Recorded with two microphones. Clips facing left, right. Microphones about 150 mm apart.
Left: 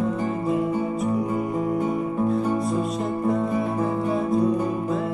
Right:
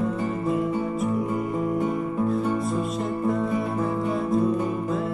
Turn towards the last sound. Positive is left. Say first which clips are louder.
# left 1 dB
turn(degrees=0)  # may be behind; listen again after turning